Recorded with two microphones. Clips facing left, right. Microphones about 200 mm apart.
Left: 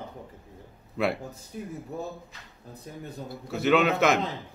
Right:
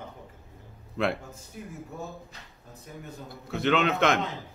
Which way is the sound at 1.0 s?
5° left (ahead or behind).